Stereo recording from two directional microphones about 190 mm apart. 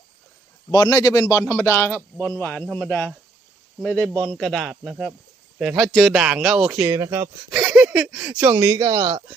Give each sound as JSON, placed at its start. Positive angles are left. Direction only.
{"t": 0.7, "sound": "a man's voice", "side_deg": 20}
{"t": 7.5, "sound": "speech", "side_deg": 0}
{"t": 8.9, "sound": "speech", "side_deg": -25}